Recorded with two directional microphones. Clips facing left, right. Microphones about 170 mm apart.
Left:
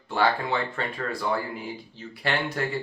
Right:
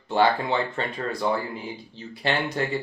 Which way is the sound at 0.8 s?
25° right (ahead or behind).